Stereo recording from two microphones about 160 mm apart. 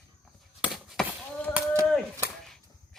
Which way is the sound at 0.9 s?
10° left (ahead or behind).